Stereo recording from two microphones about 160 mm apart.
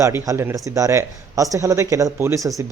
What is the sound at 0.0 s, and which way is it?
Speech, 15° right (ahead or behind).